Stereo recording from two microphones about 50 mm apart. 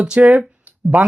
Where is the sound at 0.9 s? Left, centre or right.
Right.